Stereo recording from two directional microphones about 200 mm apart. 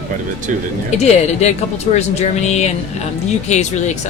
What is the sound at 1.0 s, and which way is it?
Speech, 30° left (ahead or behind).